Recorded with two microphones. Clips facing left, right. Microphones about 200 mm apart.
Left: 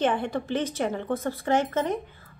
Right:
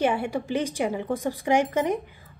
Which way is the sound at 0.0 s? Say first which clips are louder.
Right 1 dB; 10° right (ahead or behind).